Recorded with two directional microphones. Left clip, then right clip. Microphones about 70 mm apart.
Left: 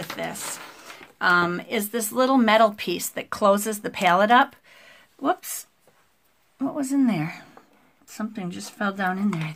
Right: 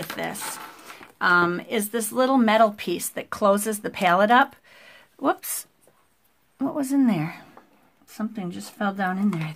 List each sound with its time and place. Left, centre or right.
0.9 s speech: right
4.7 s a sound: right
5.2 s speech: right
6.6 s speech: right
7.2 s speech: right
8.1 s speech: centre